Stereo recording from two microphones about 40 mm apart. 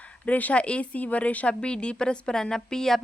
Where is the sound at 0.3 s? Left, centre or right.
Left.